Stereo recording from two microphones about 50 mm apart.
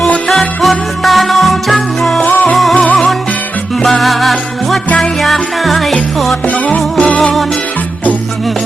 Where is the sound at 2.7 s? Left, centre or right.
Left.